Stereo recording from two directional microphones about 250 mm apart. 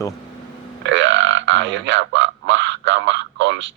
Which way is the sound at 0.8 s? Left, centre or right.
Right.